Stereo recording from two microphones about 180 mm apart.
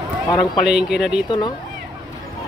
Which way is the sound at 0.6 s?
5° right (ahead or behind).